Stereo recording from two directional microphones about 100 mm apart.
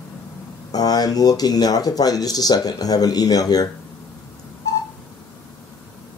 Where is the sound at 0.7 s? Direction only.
40° left (ahead or behind).